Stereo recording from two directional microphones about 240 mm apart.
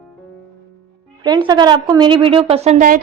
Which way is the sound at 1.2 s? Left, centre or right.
Centre.